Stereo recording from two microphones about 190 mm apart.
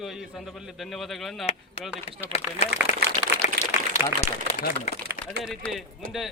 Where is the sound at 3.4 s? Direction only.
35° left (ahead or behind).